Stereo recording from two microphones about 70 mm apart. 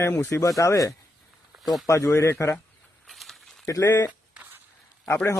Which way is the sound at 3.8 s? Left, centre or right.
Left.